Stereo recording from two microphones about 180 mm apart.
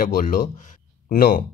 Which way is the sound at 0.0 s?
50° left (ahead or behind).